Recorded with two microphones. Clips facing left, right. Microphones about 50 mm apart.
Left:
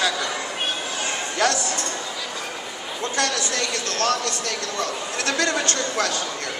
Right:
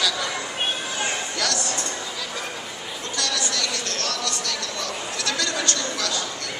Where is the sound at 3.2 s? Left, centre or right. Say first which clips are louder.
Left 2 dB; left.